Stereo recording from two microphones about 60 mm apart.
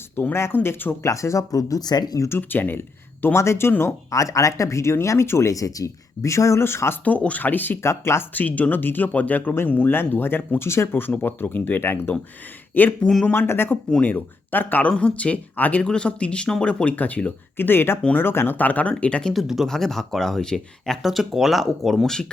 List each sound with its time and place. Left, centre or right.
0.3 s speech: left
1.0 s speech: left
2.4 s speech: left
3.3 s speech: left
4.1 s speech: left
5.5 s speech: left
7.0 s speech: left
7.8 s speech: left
8.3 s speech: left
14.8 s speech: centre
15.8 s speech: centre
17.6 s speech: left; by 19.3 s centre
19.3 s speech: centre